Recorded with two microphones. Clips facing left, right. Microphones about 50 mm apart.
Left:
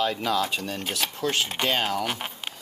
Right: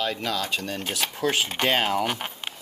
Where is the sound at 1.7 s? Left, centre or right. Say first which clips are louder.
Right 4 dB; centre.